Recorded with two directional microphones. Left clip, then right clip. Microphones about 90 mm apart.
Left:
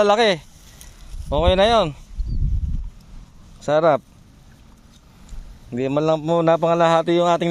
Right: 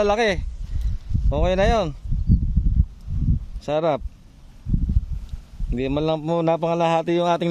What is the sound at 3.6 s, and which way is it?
Speech, 20° right (ahead or behind).